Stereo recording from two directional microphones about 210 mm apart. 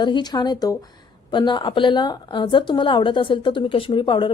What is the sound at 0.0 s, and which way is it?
A woman's voice, 20° left (ahead or behind).